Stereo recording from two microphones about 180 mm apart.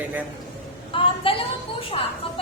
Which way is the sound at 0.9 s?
30° left (ahead or behind).